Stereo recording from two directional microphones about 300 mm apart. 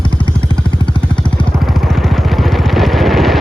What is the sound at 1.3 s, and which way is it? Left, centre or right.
Vehicle, centre.